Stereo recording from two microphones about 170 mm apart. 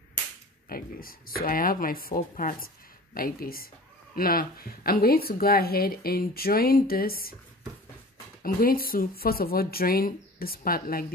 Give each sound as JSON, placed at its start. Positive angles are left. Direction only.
{"t": 0.7, "sound": "speech", "side_deg": 60}
{"t": 8.4, "sound": "speech", "side_deg": 60}